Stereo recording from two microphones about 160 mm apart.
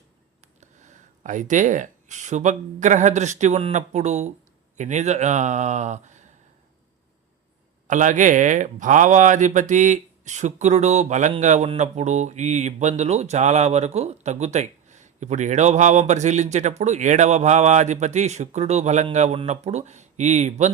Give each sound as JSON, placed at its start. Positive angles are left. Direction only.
{"t": 0.4, "sound": "speech", "side_deg": -50}
{"t": 7.9, "sound": "speech", "side_deg": -50}